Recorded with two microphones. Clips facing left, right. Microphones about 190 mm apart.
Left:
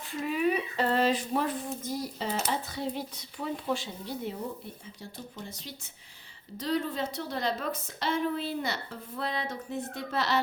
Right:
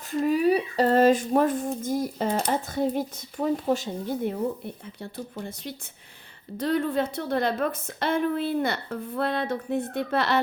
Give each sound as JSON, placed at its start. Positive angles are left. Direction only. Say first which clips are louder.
{"t": 0.1, "sound": "speech", "louder": "right 7 dB", "side_deg": -40}
{"t": 5.4, "sound": "a woman's voice", "louder": "right 7 dB", "side_deg": -55}